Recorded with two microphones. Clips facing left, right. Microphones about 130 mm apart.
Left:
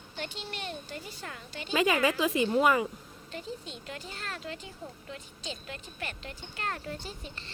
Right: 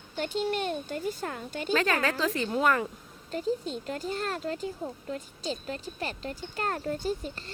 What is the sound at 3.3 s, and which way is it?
Speech, 40° right (ahead or behind).